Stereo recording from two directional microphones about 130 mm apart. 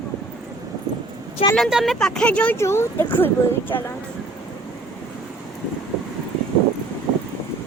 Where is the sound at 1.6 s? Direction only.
Centre (ahead or behind); by 3.3 s 20° left (ahead or behind).